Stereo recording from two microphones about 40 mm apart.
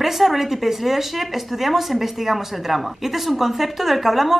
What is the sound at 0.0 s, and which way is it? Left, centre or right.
Speech, centre.